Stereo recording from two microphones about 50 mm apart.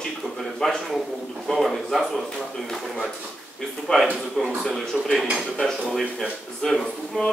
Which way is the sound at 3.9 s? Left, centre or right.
Centre.